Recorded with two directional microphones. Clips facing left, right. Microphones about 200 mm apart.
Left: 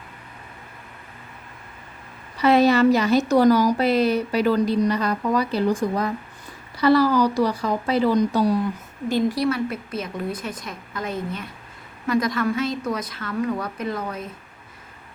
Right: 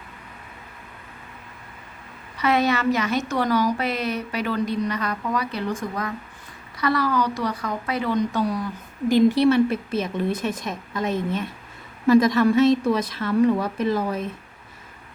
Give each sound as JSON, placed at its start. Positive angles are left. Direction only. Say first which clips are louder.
{"t": 2.4, "sound": "speech", "louder": "left 5 dB", "side_deg": 35}
{"t": 9.0, "sound": "a woman's voice", "louder": "right 5 dB", "side_deg": -15}
{"t": 9.4, "sound": "a woman's voice", "louder": "right 5 dB", "side_deg": -25}